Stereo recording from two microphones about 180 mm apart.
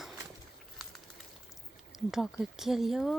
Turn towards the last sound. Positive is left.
turn(degrees=0)  # may be behind; listen again after turning